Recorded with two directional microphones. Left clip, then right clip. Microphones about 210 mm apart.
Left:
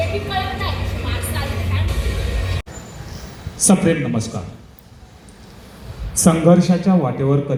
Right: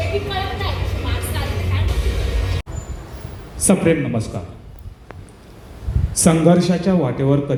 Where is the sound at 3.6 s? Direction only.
25° right (ahead or behind).